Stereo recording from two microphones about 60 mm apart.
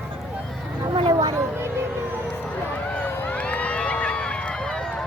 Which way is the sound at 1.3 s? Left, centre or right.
Right.